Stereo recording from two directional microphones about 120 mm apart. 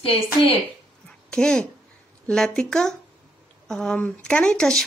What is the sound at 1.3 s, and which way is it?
A woman's voice, 10° left (ahead or behind).